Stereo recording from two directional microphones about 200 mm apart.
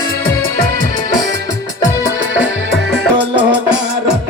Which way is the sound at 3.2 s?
25° right (ahead or behind).